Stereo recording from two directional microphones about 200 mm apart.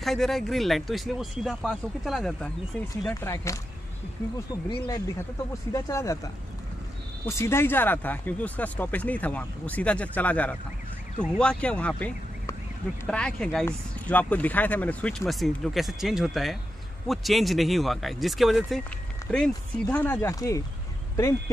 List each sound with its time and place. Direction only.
0.0 s speech: centre (ahead or behind)
3.2 s speech: 15° left (ahead or behind)
4.8 s speech: 20° left (ahead or behind)